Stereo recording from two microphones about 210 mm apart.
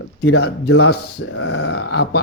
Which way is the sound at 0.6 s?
85° left.